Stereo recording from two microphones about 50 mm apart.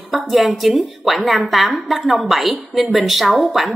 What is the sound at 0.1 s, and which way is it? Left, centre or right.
A woman's voice, centre.